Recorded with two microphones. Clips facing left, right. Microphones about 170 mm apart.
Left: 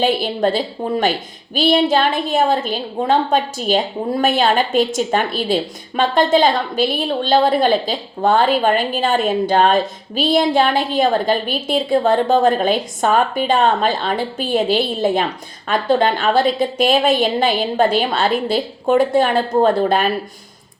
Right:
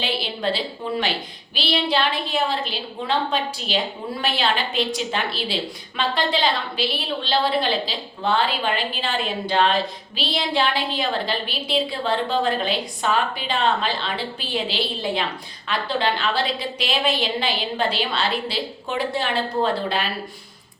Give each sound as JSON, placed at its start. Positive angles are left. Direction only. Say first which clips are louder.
{"t": 0.0, "sound": "a woman's voice", "louder": "left 9 dB", "side_deg": 45}